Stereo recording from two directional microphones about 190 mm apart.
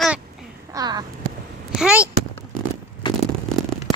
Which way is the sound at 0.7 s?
20° right (ahead or behind).